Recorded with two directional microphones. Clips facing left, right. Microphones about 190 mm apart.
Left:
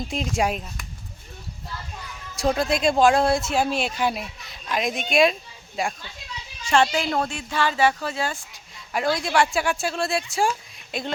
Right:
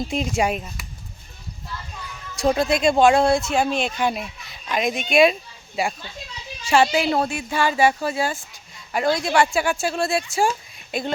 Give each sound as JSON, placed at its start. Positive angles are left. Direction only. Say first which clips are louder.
{"t": 0.1, "sound": "speech", "louder": "right 1 dB", "side_deg": 0}
{"t": 2.3, "sound": "speech", "louder": "right 3 dB", "side_deg": 0}